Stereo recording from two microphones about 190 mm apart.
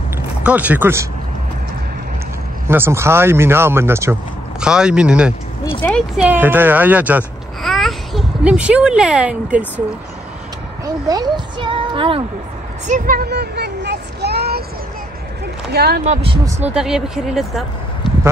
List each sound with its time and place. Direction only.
0.4 s speech: 5° right (ahead or behind)
2.7 s speech: 10° right (ahead or behind); by 6.2 s 5° left (ahead or behind)
6.2 s a child's voice: 10° right (ahead or behind)
11.1 s a child's voice: 20° right (ahead or behind)
12.8 s a sound: 45° right (ahead or behind)
15.7 s speech: 55° right (ahead or behind)
16.0 s speech: 35° right (ahead or behind)
16.6 s speech: 5° right (ahead or behind)